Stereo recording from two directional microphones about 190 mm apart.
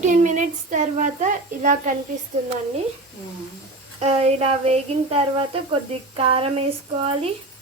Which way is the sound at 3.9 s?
35° right (ahead or behind).